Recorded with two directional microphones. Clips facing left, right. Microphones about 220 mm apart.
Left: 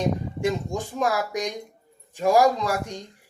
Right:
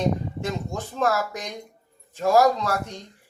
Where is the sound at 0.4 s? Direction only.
15° left (ahead or behind).